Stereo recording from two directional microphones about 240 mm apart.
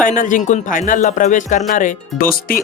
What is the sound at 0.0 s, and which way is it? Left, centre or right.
Speech, left.